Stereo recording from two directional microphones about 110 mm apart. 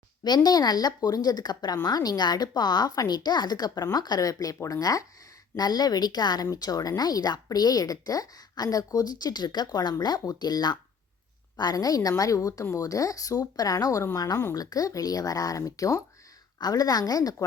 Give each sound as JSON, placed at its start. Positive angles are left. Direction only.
{"t": 0.3, "sound": "speech", "side_deg": 35}